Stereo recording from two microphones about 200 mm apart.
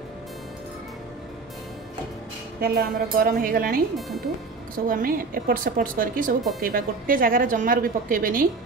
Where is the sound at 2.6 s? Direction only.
50° right (ahead or behind).